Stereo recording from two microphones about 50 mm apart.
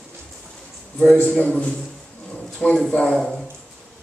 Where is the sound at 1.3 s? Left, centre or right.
Left.